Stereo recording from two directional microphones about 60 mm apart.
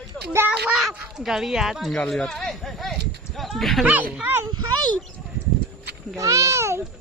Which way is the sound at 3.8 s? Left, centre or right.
Right.